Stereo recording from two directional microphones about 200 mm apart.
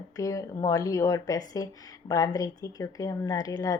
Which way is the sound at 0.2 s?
15° left (ahead or behind).